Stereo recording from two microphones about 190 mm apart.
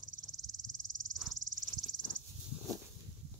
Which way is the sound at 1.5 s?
90° right.